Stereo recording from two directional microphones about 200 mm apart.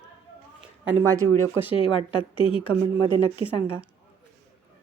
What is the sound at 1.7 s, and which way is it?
A woman's voice, 25° left (ahead or behind).